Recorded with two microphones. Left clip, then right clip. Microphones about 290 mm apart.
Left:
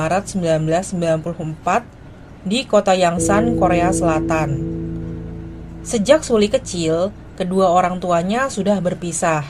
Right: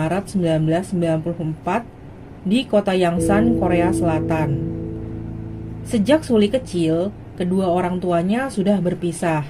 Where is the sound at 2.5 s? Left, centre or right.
Left.